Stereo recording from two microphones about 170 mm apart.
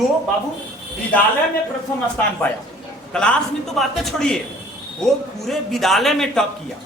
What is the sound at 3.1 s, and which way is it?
A man's voice, 5° left (ahead or behind).